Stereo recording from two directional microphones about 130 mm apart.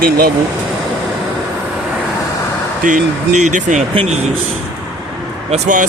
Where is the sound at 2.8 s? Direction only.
75° right (ahead or behind).